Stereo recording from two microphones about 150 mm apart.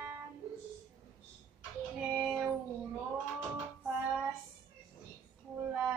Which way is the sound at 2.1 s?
10° right (ahead or behind).